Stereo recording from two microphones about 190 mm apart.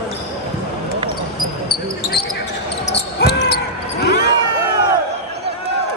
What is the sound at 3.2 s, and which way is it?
Basketball bounce, 60° left (ahead or behind).